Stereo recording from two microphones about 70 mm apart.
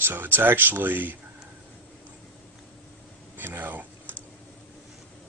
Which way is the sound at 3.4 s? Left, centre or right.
Right.